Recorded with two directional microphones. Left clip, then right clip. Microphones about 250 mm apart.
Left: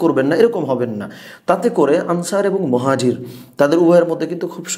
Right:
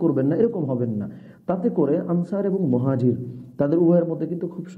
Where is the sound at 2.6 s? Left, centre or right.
Left.